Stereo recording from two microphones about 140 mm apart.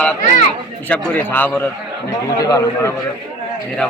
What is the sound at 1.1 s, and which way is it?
Speech, 15° left (ahead or behind).